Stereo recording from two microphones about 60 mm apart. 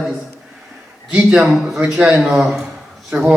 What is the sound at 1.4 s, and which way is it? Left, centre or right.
Speech, centre.